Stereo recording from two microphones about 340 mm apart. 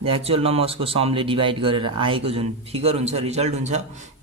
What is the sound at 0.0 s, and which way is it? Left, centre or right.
Speech, centre.